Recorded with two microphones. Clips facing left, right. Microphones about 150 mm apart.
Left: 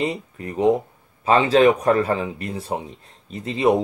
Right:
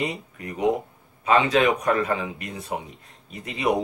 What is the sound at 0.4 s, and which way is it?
Speech, 30° left (ahead or behind).